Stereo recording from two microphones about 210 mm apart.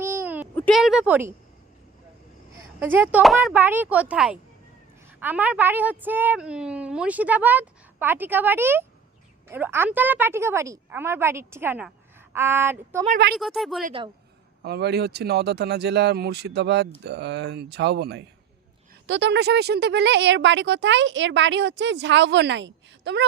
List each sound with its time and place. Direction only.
0.0 s a sound: 10° right (ahead or behind)
0.5 s speech: 5° left (ahead or behind)
2.6 s a woman's voice: 10° right (ahead or behind)
13.3 s speech: centre (ahead or behind)
14.6 s speech: 50° right (ahead or behind)